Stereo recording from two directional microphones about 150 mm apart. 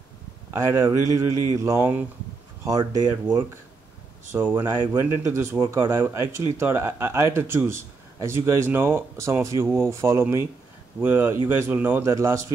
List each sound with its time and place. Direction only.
0.5 s speech: 20° right (ahead or behind)
3.1 s speech: 15° right (ahead or behind)